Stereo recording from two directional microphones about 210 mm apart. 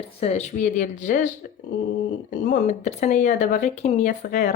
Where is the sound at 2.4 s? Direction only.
35° left (ahead or behind).